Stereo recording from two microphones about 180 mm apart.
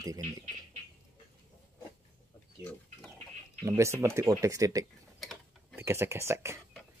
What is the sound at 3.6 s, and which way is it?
Speech, 15° right (ahead or behind).